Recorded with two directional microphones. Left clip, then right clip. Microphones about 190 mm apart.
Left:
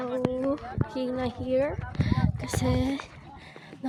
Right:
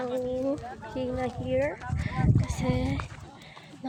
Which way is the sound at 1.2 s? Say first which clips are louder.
Left 1 dB; 35° left (ahead or behind).